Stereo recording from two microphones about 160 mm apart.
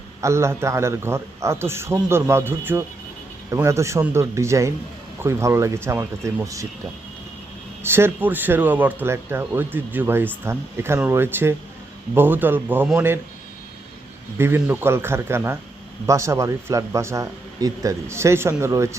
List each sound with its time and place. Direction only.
0.2 s a man's voice: 15° right (ahead or behind)
7.8 s a man's voice: 15° right (ahead or behind)
14.3 s a man's voice: 15° right (ahead or behind)